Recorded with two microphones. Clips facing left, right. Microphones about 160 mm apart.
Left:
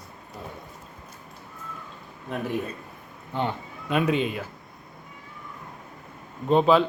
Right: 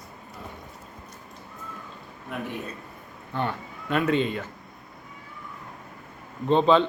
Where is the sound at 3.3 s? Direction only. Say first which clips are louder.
Left 1 dB; 15° left (ahead or behind).